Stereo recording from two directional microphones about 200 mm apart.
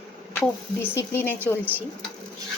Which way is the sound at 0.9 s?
10° left (ahead or behind).